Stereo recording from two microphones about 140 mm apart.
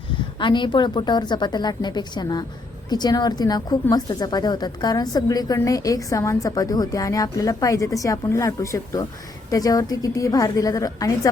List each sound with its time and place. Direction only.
0.3 s a woman's voice: 35° left (ahead or behind)